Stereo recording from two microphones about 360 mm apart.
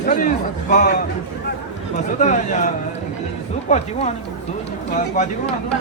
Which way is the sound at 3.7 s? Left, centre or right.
Centre.